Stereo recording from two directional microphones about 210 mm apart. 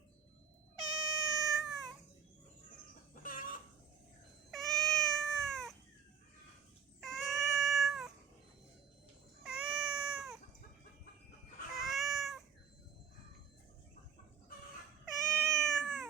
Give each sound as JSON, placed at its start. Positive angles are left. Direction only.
{"t": 0.8, "sound": "cat", "side_deg": 0}
{"t": 3.2, "sound": "chicken", "side_deg": 40}
{"t": 4.5, "sound": "cat", "side_deg": 0}
{"t": 7.0, "sound": "cat", "side_deg": 0}
{"t": 9.4, "sound": "cat", "side_deg": -5}
{"t": 11.8, "sound": "cat", "side_deg": 0}
{"t": 15.4, "sound": "cat", "side_deg": 5}